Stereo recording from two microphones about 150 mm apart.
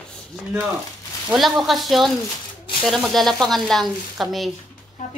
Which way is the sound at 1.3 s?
Centre (ahead or behind).